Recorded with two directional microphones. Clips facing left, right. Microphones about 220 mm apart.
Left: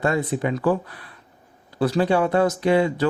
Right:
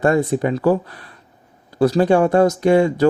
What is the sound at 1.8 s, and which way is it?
Speech, 45° right (ahead or behind).